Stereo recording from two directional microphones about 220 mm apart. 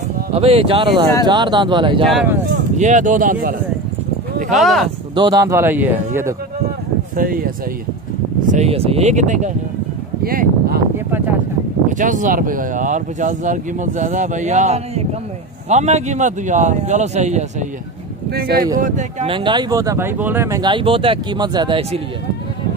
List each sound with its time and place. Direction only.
0.3 s speech: 25° right (ahead or behind)
2.0 s speech: 5° right (ahead or behind)
2.8 s speech: 35° right (ahead or behind)
4.5 s speech: centre (ahead or behind)
5.1 s speech: 20° right (ahead or behind)
7.2 s speech: 40° right (ahead or behind)
8.5 s speech: 30° right (ahead or behind)
12.0 s speech: 35° right (ahead or behind)
18.3 s speech: 45° right (ahead or behind); by 22.0 s 25° right (ahead or behind)